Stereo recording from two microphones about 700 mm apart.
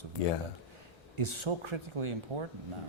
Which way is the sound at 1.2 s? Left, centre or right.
Right.